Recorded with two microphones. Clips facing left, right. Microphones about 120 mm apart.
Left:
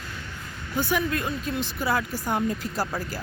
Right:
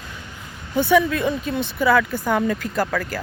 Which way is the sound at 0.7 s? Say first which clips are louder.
Right 8 dB; 80° right.